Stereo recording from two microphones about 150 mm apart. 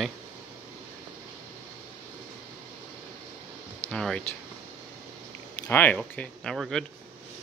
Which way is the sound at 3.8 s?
5° left (ahead or behind).